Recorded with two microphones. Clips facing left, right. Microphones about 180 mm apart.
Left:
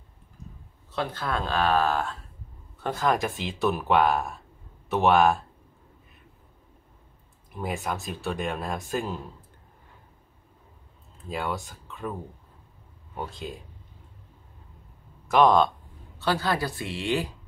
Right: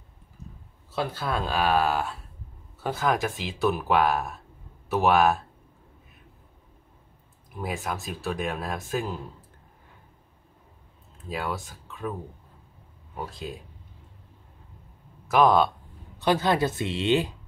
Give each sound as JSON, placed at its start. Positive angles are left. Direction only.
{"t": 0.9, "sound": "speech", "side_deg": -5}
{"t": 7.5, "sound": "speech", "side_deg": 0}
{"t": 11.2, "sound": "speech", "side_deg": 0}
{"t": 15.2, "sound": "speech", "side_deg": -5}
{"t": 16.2, "sound": "a woman's voice", "side_deg": -20}